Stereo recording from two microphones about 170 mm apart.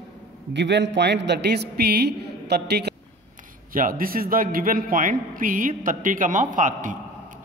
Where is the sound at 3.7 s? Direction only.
55° right (ahead or behind).